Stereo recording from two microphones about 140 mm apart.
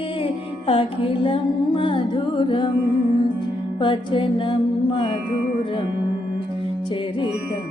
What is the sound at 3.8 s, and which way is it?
Music, 35° left (ahead or behind).